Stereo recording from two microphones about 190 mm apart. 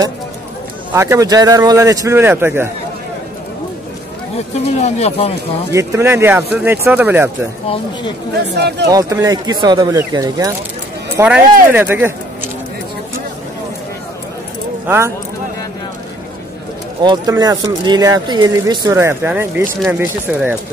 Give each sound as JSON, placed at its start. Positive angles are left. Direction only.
{"t": 0.9, "sound": "speech", "side_deg": -15}
{"t": 4.6, "sound": "speech", "side_deg": 35}
{"t": 5.7, "sound": "speech", "side_deg": -15}
{"t": 8.5, "sound": "speech", "side_deg": -60}
{"t": 8.8, "sound": "speech", "side_deg": -20}
{"t": 11.1, "sound": "speech", "side_deg": -5}
{"t": 14.9, "sound": "speech", "side_deg": -15}
{"t": 17.0, "sound": "speech", "side_deg": -20}